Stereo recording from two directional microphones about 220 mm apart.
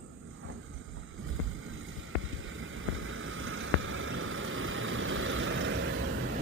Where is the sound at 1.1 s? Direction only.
65° right (ahead or behind).